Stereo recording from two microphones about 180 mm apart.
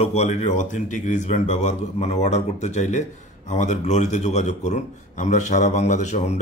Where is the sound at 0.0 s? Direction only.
40° left (ahead or behind).